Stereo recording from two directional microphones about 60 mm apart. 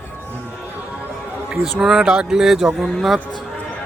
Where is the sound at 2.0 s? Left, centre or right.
Centre.